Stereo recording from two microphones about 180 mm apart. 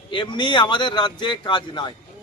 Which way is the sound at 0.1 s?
25° left (ahead or behind).